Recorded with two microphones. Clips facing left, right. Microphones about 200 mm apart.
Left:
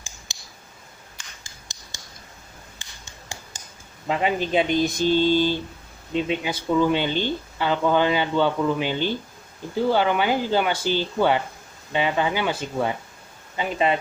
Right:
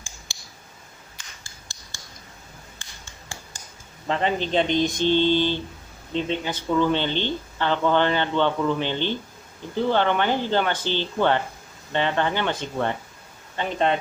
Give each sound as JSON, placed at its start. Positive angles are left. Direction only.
{"t": 0.3, "sound": "clicking", "side_deg": 20}
{"t": 1.4, "sound": "a sound", "side_deg": 20}
{"t": 4.1, "sound": "speech", "side_deg": 10}